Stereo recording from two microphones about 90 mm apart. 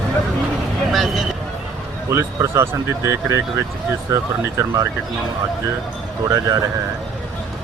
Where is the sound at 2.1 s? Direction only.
30° right (ahead or behind).